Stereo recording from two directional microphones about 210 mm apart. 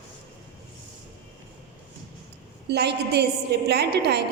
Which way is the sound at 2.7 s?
50° right (ahead or behind).